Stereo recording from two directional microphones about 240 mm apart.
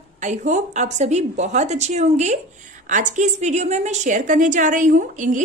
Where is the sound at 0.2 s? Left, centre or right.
Right.